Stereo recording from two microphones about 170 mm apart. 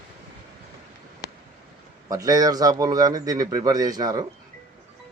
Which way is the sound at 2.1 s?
20° right (ahead or behind).